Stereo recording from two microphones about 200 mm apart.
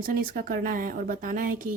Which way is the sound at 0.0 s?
45° right (ahead or behind).